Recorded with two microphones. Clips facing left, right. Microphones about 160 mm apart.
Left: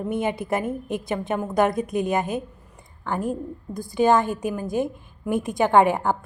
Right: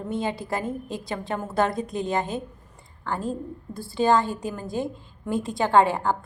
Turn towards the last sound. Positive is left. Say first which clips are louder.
# left 2 dB
turn(degrees=15)  # may be behind; listen again after turning